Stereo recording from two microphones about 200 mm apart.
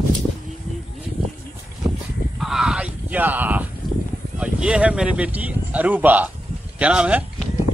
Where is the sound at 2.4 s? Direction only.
Centre (ahead or behind).